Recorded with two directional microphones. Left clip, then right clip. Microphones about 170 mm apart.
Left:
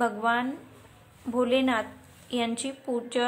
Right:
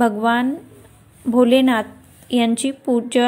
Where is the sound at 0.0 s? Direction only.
30° right (ahead or behind).